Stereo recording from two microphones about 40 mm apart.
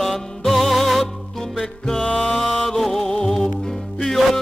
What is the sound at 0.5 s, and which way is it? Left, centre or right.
Music, centre.